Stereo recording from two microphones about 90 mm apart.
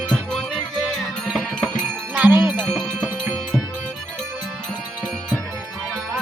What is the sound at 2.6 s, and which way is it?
Music, centre (ahead or behind).